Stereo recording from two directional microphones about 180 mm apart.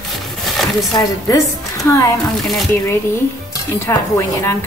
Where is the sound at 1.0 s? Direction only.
20° left (ahead or behind).